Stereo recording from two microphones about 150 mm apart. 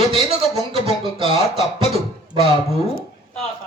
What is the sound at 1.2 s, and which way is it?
Speech, 40° right (ahead or behind).